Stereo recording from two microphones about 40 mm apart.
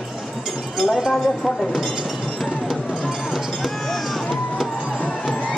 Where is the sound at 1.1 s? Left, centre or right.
Centre.